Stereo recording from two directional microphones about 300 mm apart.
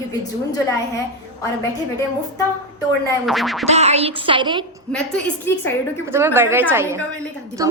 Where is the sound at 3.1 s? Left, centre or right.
Centre.